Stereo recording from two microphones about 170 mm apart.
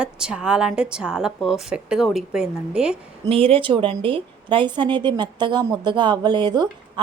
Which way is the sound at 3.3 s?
35° right (ahead or behind).